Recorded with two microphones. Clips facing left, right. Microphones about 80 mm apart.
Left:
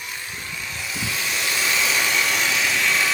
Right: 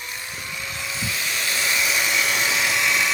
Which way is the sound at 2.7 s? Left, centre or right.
Centre.